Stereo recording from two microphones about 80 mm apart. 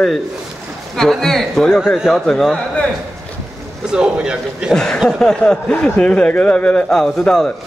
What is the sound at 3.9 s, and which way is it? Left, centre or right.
Speech, centre.